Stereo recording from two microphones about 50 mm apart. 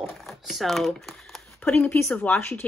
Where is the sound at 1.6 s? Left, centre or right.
Left.